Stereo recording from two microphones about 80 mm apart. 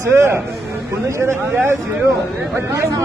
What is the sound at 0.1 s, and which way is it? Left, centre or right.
Speech, right.